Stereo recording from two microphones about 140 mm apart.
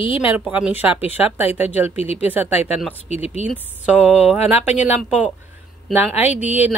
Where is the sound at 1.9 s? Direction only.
45° left (ahead or behind).